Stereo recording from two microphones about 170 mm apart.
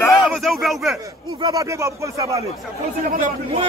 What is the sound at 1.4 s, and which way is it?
Speech, 20° right (ahead or behind).